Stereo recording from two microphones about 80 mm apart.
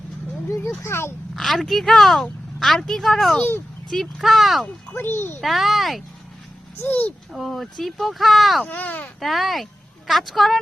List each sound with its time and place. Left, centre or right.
0.4 s a sound: left
0.8 s speech: left
1.4 s speech: centre
4.9 s speech: left
5.4 s speech: centre
6.7 s speech: left
7.3 s speech: centre
8.6 s speech: left
9.2 s speech: centre